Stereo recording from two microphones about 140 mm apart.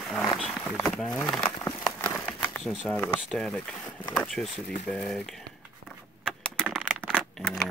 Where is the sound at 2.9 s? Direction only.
15° left (ahead or behind).